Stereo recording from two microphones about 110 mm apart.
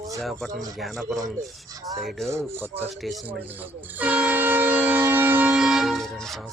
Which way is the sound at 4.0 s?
15° right (ahead or behind).